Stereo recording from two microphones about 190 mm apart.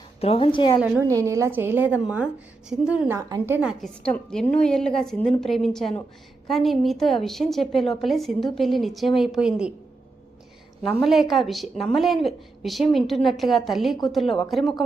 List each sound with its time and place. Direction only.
0.2 s a woman's voice: 30° left (ahead or behind)
0.8 s a woman's voice: 10° right (ahead or behind)
3.2 s a woman's voice: 20° right (ahead or behind)
11.0 s a woman's voice: centre (ahead or behind)